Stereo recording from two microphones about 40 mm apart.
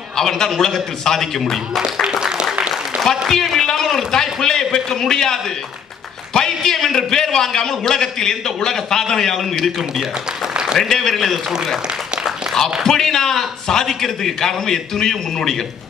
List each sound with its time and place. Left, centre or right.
0.1 s a man's voice: centre
2.0 s a sound: centre
3.3 s a man's voice: centre
10.8 s a man's voice: centre
12.8 s a man's voice: centre